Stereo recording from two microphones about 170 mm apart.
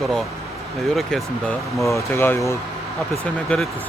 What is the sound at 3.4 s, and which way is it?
Speech, 5° left (ahead or behind).